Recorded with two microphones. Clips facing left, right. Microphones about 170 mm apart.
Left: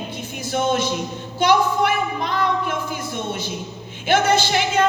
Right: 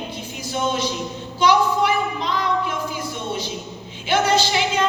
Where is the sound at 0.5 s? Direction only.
55° left (ahead or behind).